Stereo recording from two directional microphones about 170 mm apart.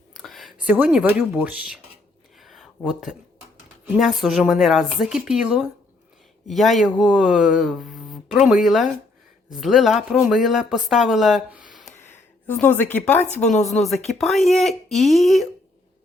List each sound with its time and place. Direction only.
0.1 s speech: centre (ahead or behind)
2.4 s a sound: centre (ahead or behind)
3.9 s speech: centre (ahead or behind)
12.0 s speech: 10° left (ahead or behind)